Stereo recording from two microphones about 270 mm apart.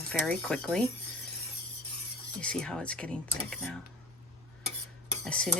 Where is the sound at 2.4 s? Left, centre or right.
Centre.